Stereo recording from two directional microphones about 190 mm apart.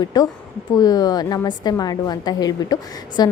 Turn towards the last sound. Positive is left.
turn(degrees=20)  # may be behind; listen again after turning